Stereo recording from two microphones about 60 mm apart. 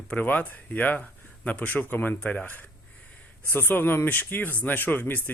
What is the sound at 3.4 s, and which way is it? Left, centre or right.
Speech, left.